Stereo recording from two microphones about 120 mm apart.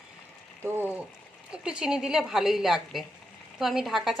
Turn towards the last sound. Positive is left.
turn(degrees=0)  # may be behind; listen again after turning